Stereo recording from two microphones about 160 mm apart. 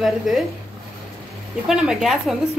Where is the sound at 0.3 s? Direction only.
Centre (ahead or behind).